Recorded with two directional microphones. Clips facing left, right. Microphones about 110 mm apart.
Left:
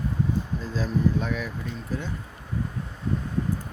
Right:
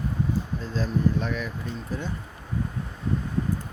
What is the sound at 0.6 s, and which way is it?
Speech, 5° left (ahead or behind).